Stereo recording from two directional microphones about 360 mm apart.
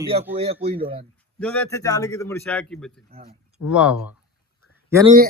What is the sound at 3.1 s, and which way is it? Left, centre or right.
Speech, centre.